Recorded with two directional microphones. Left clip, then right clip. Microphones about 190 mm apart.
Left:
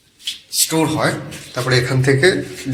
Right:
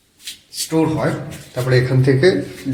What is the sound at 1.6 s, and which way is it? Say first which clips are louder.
Speech: even; 15° right (ahead or behind).